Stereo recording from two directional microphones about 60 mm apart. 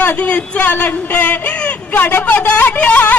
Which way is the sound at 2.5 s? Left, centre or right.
Left.